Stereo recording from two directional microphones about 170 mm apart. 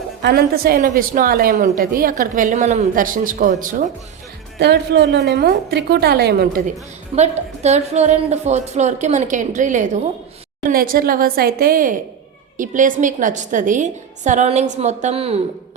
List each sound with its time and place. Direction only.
0.2 s a woman's voice: 70° right (ahead or behind); by 3.8 s 50° right (ahead or behind)
4.6 s a woman's voice: 75° right (ahead or behind)
7.2 s a woman's voice: 40° right (ahead or behind)
10.7 s a woman's voice: 55° right (ahead or behind); by 15.4 s 35° right (ahead or behind)